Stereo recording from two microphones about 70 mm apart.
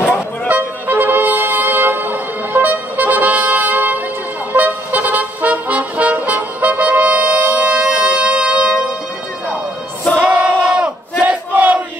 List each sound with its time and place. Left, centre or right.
0.5 s music: right
10.2 s battle cry: right